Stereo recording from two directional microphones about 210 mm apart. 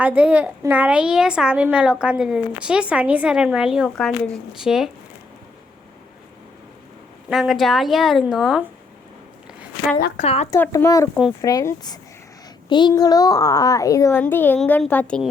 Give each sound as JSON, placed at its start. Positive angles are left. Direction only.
{"t": 0.0, "sound": "a woman's voice", "side_deg": -10}
{"t": 7.3, "sound": "a woman's voice", "side_deg": 0}
{"t": 10.2, "sound": "speech", "side_deg": 30}
{"t": 10.5, "sound": "a child's voice", "side_deg": 15}